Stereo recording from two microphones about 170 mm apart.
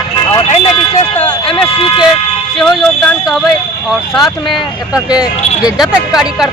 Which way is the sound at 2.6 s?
5° left (ahead or behind).